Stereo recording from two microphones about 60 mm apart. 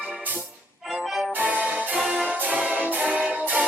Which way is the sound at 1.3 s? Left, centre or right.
Right.